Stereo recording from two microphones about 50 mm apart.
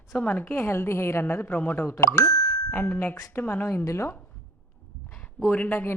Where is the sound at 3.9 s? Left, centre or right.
Left.